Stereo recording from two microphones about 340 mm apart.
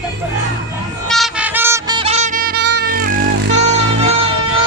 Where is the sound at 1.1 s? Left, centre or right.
Centre; by 3.6 s right.